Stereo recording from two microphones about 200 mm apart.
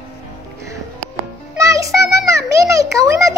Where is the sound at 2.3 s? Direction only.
15° right (ahead or behind).